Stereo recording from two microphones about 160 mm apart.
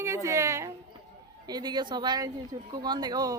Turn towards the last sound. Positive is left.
turn(degrees=-25)  # may be behind; listen again after turning